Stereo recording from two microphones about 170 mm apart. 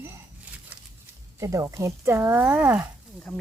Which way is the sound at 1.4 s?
20° right (ahead or behind).